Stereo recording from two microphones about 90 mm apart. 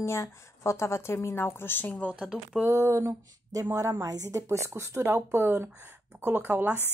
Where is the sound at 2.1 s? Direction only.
5° right (ahead or behind).